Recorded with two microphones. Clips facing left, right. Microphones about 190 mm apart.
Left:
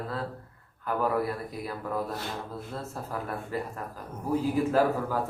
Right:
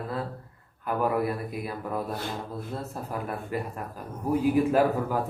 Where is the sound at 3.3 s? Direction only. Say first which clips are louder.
Right 1 dB; 15° right (ahead or behind).